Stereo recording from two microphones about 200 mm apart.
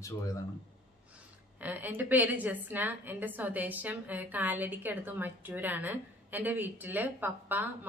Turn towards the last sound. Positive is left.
turn(degrees=-10)  # may be behind; listen again after turning